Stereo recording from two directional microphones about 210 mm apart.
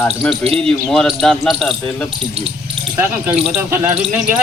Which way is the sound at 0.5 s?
5° left (ahead or behind).